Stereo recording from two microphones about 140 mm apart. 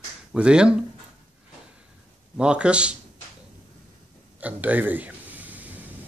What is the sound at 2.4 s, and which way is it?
Speech, 5° right (ahead or behind).